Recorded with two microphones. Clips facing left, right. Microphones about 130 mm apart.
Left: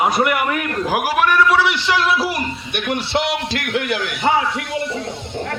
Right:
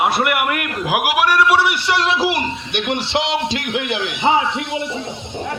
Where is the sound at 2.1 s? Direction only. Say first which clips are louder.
Right 2 dB; centre (ahead or behind).